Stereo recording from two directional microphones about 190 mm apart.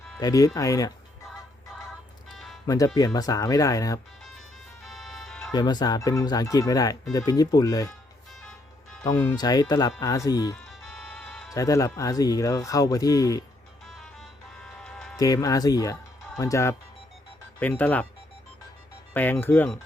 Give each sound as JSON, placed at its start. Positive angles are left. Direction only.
{"t": 0.2, "sound": "speech", "side_deg": 20}
{"t": 2.6, "sound": "speech", "side_deg": 20}
{"t": 4.8, "sound": "music", "side_deg": 0}
{"t": 5.5, "sound": "speech", "side_deg": 20}
{"t": 8.3, "sound": "music", "side_deg": 0}
{"t": 9.0, "sound": "speech", "side_deg": 20}
{"t": 10.7, "sound": "music", "side_deg": 0}
{"t": 11.5, "sound": "speech", "side_deg": 15}
{"t": 13.8, "sound": "music", "side_deg": 0}
{"t": 15.1, "sound": "speech", "side_deg": 20}
{"t": 19.1, "sound": "speech", "side_deg": 10}